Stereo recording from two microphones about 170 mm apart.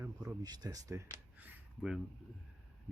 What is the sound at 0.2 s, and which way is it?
Speech, 25° right (ahead or behind).